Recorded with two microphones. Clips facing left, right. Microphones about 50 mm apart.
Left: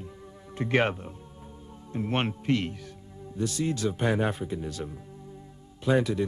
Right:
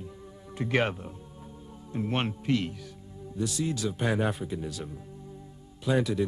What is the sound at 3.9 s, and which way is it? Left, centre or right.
Speech, centre.